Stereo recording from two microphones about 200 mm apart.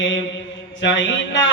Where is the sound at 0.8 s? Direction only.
65° left (ahead or behind).